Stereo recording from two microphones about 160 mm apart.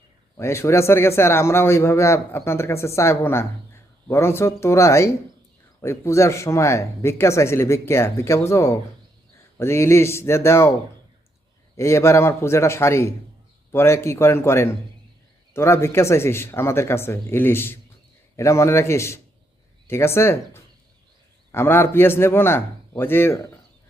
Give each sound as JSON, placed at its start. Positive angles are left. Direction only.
{"t": 0.3, "sound": "a man's voice", "side_deg": 15}
{"t": 11.8, "sound": "a man's voice", "side_deg": 15}